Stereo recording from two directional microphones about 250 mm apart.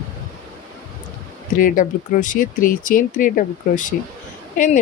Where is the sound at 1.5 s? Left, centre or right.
Left.